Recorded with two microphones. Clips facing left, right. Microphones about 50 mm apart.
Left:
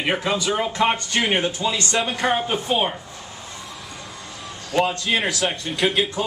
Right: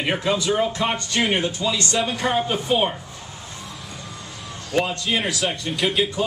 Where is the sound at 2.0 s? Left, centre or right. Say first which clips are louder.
Left 1 dB; centre.